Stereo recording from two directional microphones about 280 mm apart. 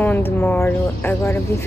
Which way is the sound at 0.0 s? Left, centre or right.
Centre.